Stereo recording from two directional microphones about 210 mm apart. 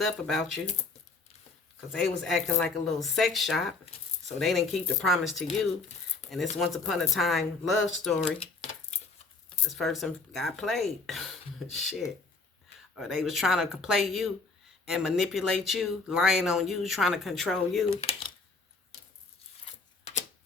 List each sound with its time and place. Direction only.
0.0 s speech: centre (ahead or behind)
1.9 s speech: centre (ahead or behind)
9.6 s speech: centre (ahead or behind)